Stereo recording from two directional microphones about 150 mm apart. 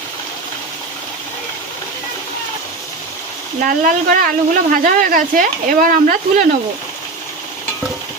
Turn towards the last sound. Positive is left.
turn(degrees=-70)  # may be behind; listen again after turning